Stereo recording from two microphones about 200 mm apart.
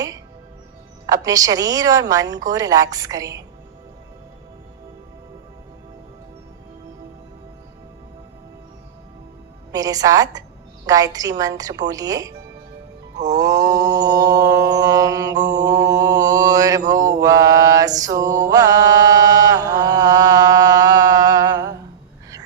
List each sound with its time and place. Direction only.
1.0 s a woman's voice: 20° right (ahead or behind)
9.7 s a woman's voice: 20° right (ahead or behind)
13.3 s mantra: 20° right (ahead or behind)